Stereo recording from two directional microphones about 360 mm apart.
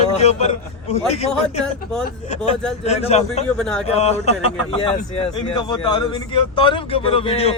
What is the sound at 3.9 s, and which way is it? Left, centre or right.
Speech, centre.